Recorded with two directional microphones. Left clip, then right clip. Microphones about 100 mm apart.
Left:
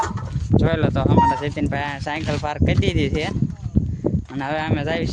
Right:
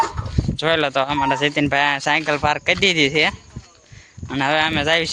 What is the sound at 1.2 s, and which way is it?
Speech, 25° right (ahead or behind).